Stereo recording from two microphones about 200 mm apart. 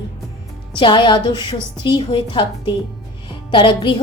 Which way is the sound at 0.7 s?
25° left (ahead or behind).